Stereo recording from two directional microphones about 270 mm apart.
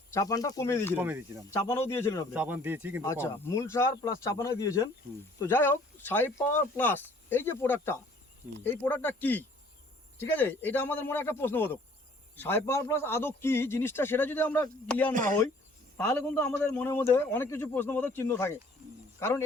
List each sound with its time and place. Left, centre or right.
0.1 s a man's voice: centre
0.9 s speech: centre
1.5 s a man's voice: centre
2.3 s speech: centre
3.0 s a man's voice: centre
15.1 s speech: right
16.3 s a man's voice: centre